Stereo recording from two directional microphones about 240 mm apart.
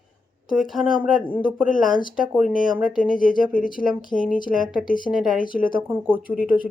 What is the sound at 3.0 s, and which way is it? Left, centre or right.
Speech, left.